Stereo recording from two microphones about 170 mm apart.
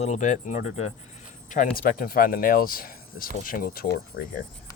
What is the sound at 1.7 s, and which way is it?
Speech, 60° left (ahead or behind).